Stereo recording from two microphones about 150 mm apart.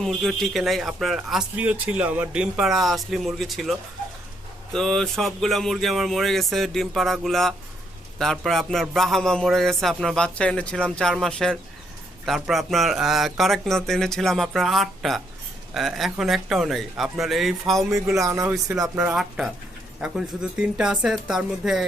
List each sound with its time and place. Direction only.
0.0 s speech: centre (ahead or behind)
18.2 s speech: 20° right (ahead or behind)
18.9 s speech: 5° right (ahead or behind)